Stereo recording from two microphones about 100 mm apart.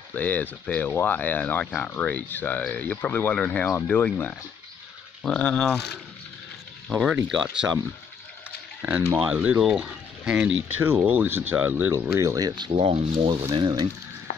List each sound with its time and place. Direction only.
0.1 s speech: 15° left (ahead or behind)
6.9 s speech: 10° right (ahead or behind)
8.5 s a sound: 15° right (ahead or behind)
9.2 s speech: 15° right (ahead or behind)
11.9 s speech: 25° right (ahead or behind); by 13.4 s 65° right (ahead or behind)
13.6 s speech: 50° right (ahead or behind)